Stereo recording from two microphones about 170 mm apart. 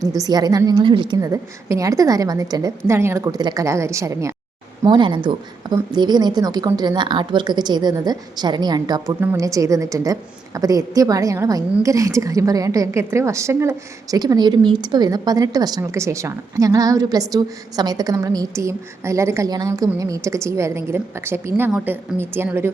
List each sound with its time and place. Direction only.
0.0 s a woman's voice: 20° right (ahead or behind)